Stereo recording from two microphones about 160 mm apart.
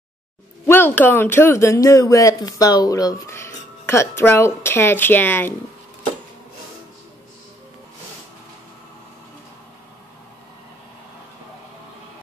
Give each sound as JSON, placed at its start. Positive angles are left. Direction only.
{"t": 0.7, "sound": "speech", "side_deg": 15}